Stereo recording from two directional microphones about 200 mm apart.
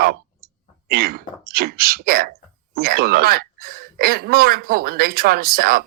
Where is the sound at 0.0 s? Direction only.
45° right (ahead or behind).